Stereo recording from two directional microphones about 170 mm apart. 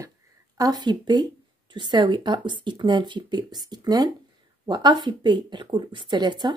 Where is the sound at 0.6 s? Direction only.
25° right (ahead or behind).